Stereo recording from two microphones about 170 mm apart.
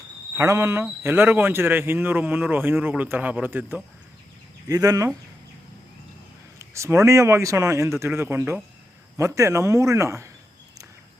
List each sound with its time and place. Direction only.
0.3 s a man's voice: 15° right (ahead or behind)
4.7 s speech: 20° right (ahead or behind)
6.6 s a man's voice: 15° right (ahead or behind)